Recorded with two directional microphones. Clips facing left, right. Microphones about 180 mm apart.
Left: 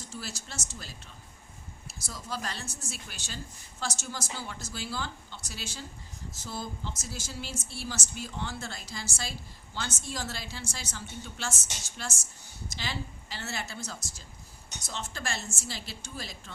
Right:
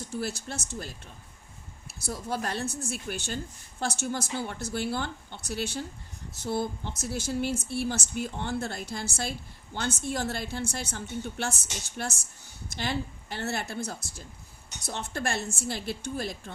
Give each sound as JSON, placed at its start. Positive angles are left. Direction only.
{"t": 0.1, "sound": "a woman's voice", "side_deg": -60}